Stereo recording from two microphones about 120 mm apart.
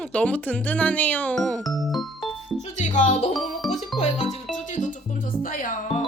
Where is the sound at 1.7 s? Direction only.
Centre (ahead or behind).